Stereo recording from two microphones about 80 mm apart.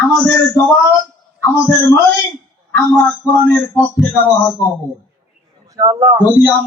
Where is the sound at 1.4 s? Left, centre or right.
Left.